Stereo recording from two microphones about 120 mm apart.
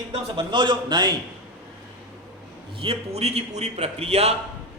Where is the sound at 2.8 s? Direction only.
55° right (ahead or behind).